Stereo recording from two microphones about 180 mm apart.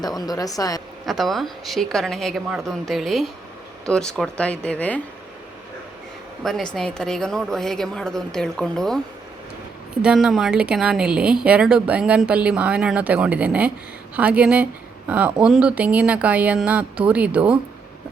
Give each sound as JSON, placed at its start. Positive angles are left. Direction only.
{"t": 0.2, "sound": "speech", "side_deg": 20}
{"t": 1.0, "sound": "a woman's voice", "side_deg": 0}
{"t": 6.4, "sound": "a woman's voice", "side_deg": 0}